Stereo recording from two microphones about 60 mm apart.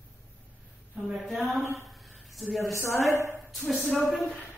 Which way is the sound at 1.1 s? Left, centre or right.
Centre.